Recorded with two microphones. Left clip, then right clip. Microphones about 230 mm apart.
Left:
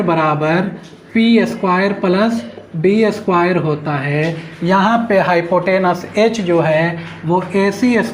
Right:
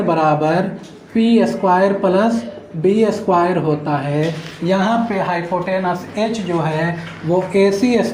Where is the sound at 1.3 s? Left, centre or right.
Left.